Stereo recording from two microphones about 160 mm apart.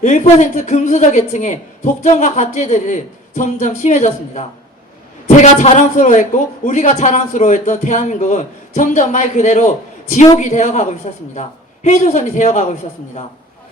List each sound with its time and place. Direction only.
0.0 s a man's voice: 45° left (ahead or behind)